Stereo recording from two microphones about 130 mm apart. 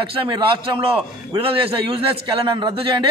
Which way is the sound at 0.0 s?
40° right (ahead or behind).